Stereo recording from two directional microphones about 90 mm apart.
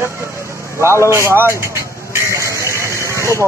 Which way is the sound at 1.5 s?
30° right (ahead or behind).